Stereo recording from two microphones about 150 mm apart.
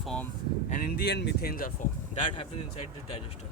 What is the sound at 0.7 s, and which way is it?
Speech, 75° left (ahead or behind).